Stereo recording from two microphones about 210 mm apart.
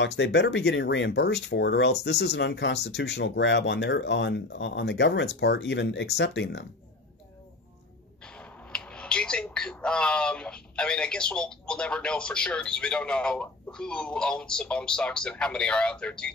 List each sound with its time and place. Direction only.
0.0 s speech: 55° left (ahead or behind)
8.2 s speech: 5° left (ahead or behind)